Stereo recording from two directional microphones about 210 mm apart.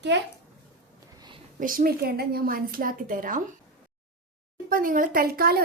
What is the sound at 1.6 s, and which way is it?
A woman's voice, 40° right (ahead or behind).